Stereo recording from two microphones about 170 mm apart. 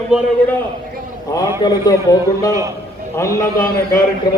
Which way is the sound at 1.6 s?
20° left (ahead or behind).